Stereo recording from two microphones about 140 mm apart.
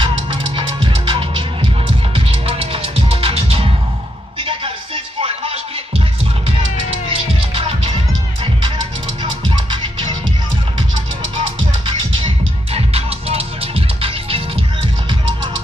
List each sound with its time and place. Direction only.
0.0 s music: 35° right (ahead or behind)
7.1 s music: 45° right (ahead or behind)
9.2 s music: 35° right (ahead or behind)
12.7 s music: 45° right (ahead or behind)